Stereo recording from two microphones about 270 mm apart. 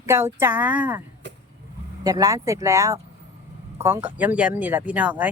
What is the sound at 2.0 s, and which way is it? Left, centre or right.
A woman's voice, centre.